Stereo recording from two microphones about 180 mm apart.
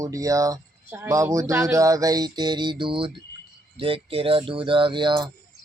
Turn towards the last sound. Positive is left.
turn(degrees=-25)  # may be behind; listen again after turning